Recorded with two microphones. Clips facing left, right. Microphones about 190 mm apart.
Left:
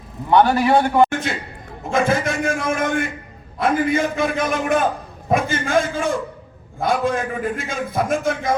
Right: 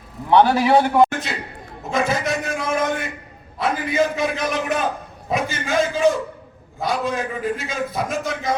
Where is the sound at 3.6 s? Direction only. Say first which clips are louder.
Left 2 dB; 50° left (ahead or behind).